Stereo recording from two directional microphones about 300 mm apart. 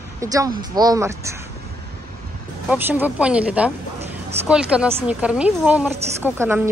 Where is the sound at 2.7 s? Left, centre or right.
Centre.